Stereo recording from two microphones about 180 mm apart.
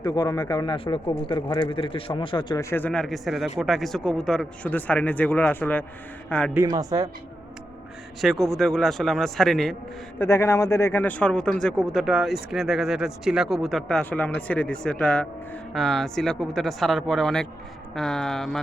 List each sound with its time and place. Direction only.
0.0 s a man's voice: 20° left (ahead or behind); by 6.5 s 5° left (ahead or behind)
6.5 s speech: 15° right (ahead or behind)
8.2 s speech: centre (ahead or behind)
10.2 s speech: 15° left (ahead or behind)